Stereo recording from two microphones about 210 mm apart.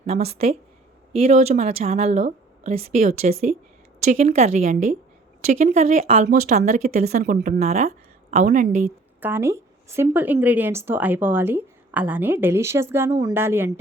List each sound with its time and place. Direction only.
0.0 s speech: 30° right (ahead or behind)
9.2 s speech: 10° right (ahead or behind)